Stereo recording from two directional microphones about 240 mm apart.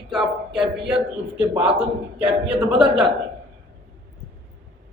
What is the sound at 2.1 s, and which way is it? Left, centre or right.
Speech, centre.